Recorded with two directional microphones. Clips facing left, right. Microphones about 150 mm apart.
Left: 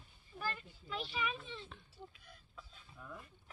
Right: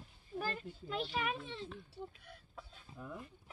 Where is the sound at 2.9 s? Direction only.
20° right (ahead or behind).